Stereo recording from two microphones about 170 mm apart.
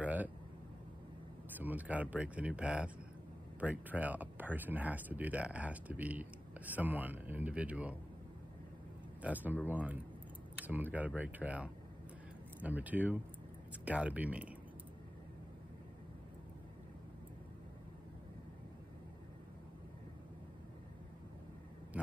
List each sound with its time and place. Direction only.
0.0 s a sound: 10° right (ahead or behind)
1.6 s speech: 10° right (ahead or behind)
9.2 s speech: 10° right (ahead or behind)